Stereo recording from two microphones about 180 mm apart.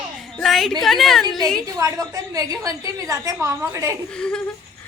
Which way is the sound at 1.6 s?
20° right (ahead or behind).